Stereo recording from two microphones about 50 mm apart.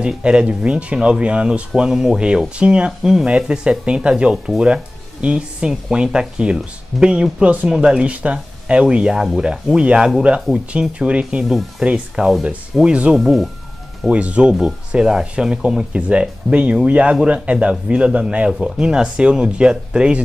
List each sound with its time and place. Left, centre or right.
0.0 s speech: centre
1.8 s speech: centre
3.0 s speech: centre
8.0 s speech: right
13.1 s speech: centre
14.1 s speech: right